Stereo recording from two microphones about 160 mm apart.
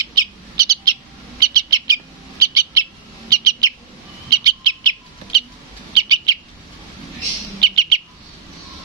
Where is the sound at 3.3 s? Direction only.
25° right (ahead or behind).